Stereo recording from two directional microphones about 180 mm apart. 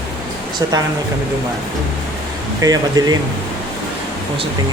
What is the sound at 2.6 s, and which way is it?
Speech, 20° right (ahead or behind).